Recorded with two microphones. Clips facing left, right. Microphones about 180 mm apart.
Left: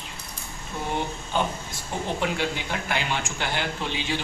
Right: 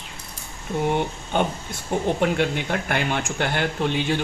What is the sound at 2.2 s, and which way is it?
Speech, 55° right (ahead or behind).